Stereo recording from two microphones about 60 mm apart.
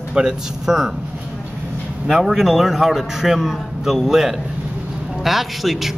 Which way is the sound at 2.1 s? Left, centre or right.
Centre.